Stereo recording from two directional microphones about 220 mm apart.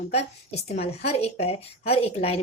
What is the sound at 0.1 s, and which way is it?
A woman's voice, 30° left (ahead or behind).